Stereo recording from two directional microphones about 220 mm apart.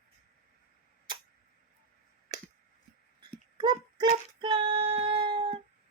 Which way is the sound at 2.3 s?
15° right (ahead or behind).